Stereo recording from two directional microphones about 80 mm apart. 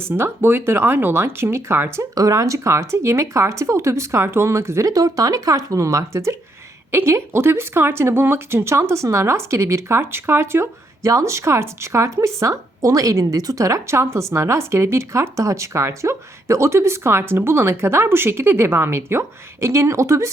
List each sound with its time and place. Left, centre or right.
0.0 s speech: right
2.1 s speech: right